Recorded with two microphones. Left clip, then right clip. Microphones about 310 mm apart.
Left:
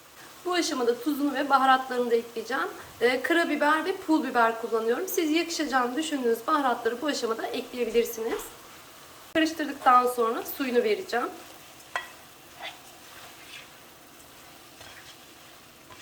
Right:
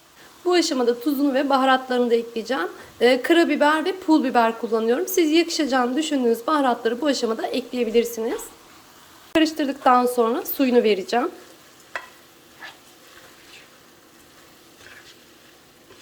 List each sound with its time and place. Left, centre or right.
0.5 s speech: right
9.3 s speech: right